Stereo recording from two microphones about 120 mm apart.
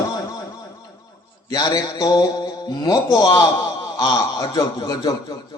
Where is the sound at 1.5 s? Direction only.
35° left (ahead or behind).